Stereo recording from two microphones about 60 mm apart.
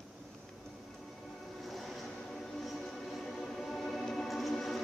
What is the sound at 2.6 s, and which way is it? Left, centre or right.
Music, centre.